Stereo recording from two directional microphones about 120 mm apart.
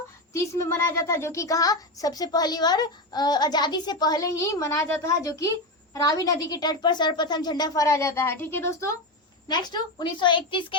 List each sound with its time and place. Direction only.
0.3 s a child's voice: 25° left (ahead or behind)
9.5 s a child's voice: 40° left (ahead or behind)